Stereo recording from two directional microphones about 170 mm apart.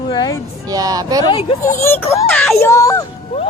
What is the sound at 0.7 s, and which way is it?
Speech, 20° right (ahead or behind).